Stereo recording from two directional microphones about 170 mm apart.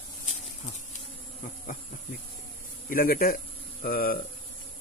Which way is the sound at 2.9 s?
60° left (ahead or behind).